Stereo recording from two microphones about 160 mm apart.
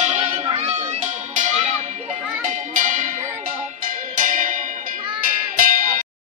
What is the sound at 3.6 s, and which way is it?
Music, 50° right (ahead or behind).